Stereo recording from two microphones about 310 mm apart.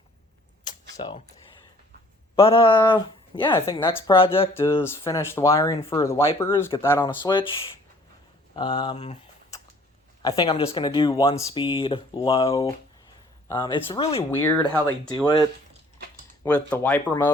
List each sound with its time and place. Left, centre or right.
0.6 s a sound: centre
2.3 s speech: centre
14.3 s speech: centre